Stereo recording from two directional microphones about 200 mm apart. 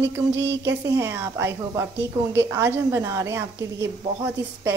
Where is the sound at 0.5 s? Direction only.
15° right (ahead or behind).